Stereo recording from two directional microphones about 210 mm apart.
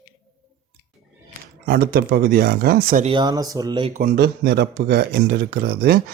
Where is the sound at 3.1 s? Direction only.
20° right (ahead or behind).